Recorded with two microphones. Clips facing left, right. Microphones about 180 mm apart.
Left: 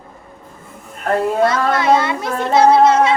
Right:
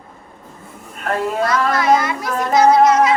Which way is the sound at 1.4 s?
25° left (ahead or behind).